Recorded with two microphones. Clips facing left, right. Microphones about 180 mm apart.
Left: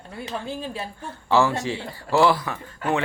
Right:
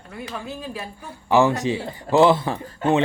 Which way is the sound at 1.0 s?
15° right (ahead or behind).